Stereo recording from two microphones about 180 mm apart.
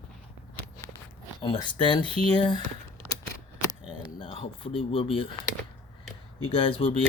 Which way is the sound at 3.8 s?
30° left (ahead or behind).